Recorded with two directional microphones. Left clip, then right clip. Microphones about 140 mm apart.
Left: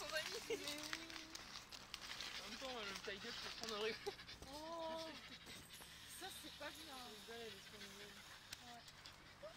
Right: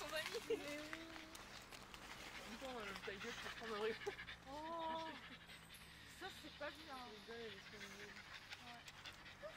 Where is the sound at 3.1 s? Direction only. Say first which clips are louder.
Left 1 dB; 70° left (ahead or behind).